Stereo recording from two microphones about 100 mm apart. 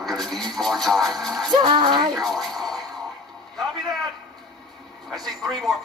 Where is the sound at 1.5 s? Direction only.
50° right (ahead or behind).